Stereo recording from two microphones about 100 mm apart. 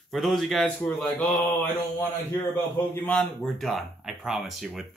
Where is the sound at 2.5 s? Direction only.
20° left (ahead or behind).